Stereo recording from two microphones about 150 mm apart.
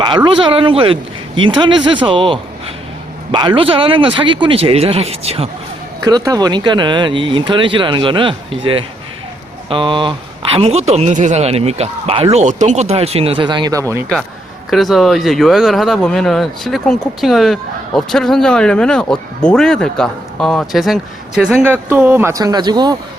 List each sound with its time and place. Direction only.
0.3 s speech: 35° right (ahead or behind)
6.0 s a man's voice: 25° right (ahead or behind)
14.7 s speech: centre (ahead or behind)
21.6 s speech: 15° right (ahead or behind)